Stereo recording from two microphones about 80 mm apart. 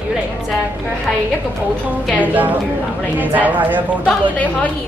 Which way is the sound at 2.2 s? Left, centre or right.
Right.